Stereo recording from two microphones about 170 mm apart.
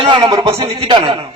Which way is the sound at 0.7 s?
30° right (ahead or behind).